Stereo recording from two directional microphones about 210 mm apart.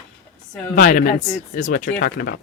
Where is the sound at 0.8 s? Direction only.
40° left (ahead or behind).